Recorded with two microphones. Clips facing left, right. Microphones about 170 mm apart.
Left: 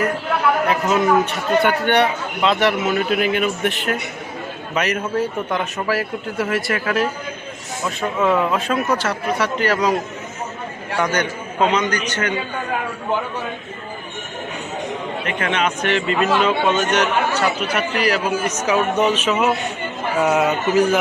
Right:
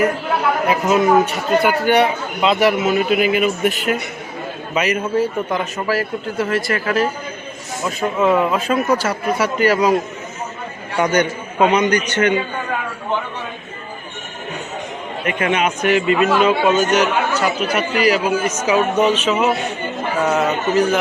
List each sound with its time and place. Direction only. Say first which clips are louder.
0.7 s a man's voice: right 5 dB; centre (ahead or behind)
10.9 s a man's voice: right 4 dB; 20° right (ahead or behind)
15.3 s speech: right 3 dB; 15° right (ahead or behind); by 21.0 s centre (ahead or behind)